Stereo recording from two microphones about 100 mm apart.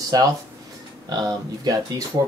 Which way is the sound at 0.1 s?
35° right (ahead or behind).